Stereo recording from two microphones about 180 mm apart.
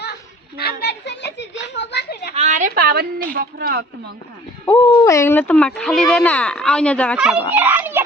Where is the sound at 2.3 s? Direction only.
45° right (ahead or behind); by 4.1 s 60° right (ahead or behind).